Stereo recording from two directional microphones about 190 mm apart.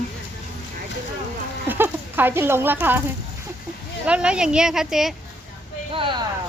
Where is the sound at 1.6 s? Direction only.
10° right (ahead or behind).